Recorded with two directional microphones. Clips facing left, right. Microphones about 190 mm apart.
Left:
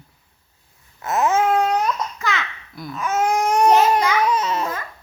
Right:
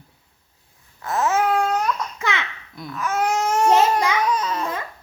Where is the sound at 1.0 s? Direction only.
20° left (ahead or behind).